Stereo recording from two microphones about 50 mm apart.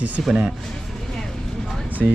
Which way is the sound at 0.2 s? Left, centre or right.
Centre.